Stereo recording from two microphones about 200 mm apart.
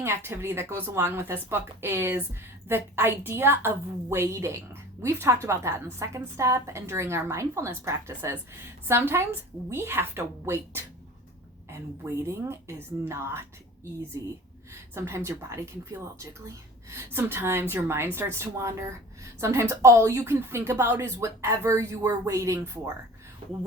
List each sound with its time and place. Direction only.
0.0 s speech: 10° right (ahead or behind)
14.9 s speech: 15° right (ahead or behind)